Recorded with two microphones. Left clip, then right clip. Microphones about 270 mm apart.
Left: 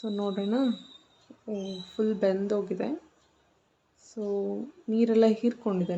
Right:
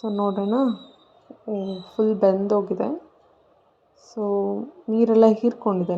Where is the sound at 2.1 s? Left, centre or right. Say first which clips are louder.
Right 8 dB; centre.